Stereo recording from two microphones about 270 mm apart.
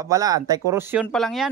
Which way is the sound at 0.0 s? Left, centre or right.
Centre.